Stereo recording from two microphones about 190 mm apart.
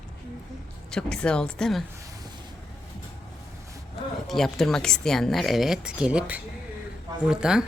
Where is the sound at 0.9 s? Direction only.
5° left (ahead or behind).